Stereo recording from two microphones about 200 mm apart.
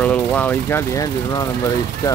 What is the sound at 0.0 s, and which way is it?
Speech, 5° left (ahead or behind).